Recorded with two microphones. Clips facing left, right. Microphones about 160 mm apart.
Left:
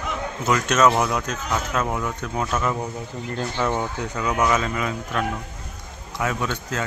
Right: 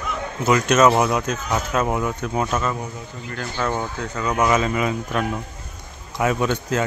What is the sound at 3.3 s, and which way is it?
Speech, 20° left (ahead or behind).